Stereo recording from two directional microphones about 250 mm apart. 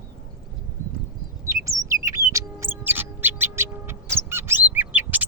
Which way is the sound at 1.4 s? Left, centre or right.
Centre.